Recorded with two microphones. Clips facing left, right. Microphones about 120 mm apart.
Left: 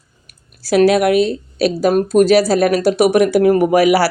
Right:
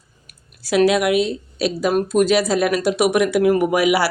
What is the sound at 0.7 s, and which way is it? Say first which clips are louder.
Speech: left 4 dB; 40° left (ahead or behind).